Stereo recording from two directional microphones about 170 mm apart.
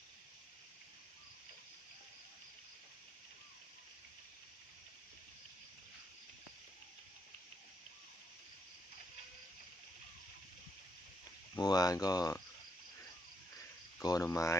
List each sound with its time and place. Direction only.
11.5 s speech: 20° left (ahead or behind)
14.0 s speech: 20° left (ahead or behind)